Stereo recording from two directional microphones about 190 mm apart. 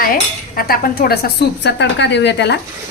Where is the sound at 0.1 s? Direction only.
50° left (ahead or behind).